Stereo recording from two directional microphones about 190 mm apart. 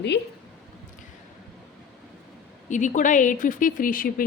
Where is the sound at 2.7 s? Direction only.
40° left (ahead or behind).